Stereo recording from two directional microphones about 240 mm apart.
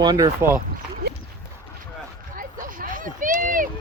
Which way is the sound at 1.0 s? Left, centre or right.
Right.